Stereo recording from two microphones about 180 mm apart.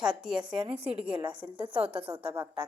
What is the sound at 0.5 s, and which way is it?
A woman's voice, 30° right (ahead or behind).